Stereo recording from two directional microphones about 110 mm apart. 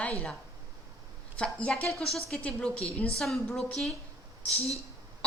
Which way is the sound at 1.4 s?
10° left (ahead or behind).